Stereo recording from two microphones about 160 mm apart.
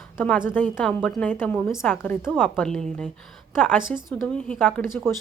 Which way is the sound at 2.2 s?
5° right (ahead or behind).